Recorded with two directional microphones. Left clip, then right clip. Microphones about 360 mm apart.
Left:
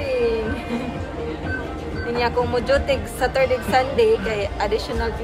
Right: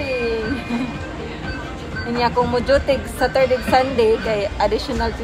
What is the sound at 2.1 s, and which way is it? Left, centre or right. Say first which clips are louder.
A woman's voice: right 3 dB; centre.